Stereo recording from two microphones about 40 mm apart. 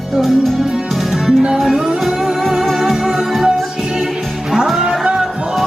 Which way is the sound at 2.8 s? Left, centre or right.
Centre.